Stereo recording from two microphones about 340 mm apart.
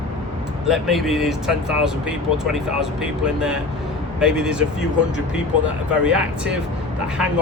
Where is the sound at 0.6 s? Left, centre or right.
Centre.